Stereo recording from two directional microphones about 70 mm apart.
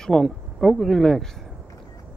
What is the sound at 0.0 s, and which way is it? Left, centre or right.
Speech, centre.